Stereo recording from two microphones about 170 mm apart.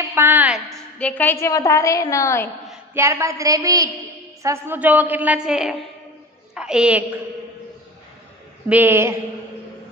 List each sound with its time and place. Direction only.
0.1 s a woman's voice: 10° right (ahead or behind)
0.7 s a woman's voice: 5° left (ahead or behind)
2.9 s a woman's voice: 15° right (ahead or behind)
8.6 s a woman's voice: 10° right (ahead or behind)